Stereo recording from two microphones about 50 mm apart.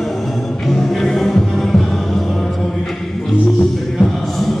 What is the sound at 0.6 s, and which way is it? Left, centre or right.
Music, centre.